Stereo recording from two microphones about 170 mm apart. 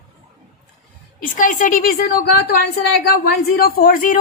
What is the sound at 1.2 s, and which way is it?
A woman's voice, 50° left (ahead or behind).